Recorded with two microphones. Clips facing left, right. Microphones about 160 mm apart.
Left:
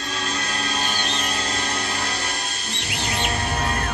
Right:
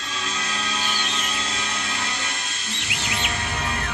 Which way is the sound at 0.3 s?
55° left (ahead or behind).